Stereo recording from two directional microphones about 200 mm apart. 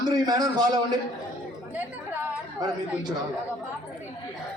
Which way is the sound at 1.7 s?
10° right (ahead or behind).